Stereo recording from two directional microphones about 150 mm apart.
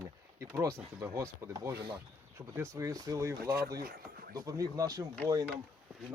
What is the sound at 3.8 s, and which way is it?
Speech, 80° right.